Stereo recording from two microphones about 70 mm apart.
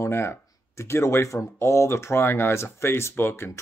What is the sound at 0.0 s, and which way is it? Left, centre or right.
Speech, left.